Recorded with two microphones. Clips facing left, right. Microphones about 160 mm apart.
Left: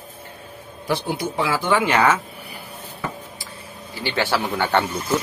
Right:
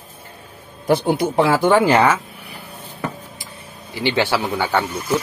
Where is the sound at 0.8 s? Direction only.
55° right (ahead or behind).